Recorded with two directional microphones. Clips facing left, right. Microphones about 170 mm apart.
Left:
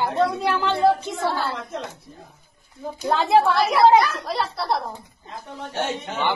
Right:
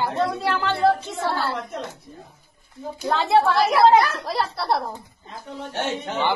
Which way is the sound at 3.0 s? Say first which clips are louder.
Left 1 dB; 15° left (ahead or behind).